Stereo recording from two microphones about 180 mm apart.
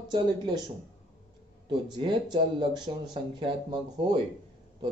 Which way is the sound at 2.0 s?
25° right (ahead or behind).